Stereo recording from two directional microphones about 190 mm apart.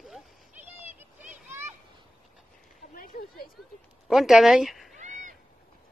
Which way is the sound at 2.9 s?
50° left (ahead or behind).